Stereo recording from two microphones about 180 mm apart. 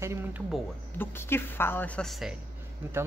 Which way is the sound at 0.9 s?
10° left (ahead or behind).